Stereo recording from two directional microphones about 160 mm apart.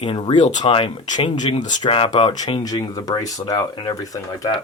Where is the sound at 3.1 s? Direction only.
25° left (ahead or behind).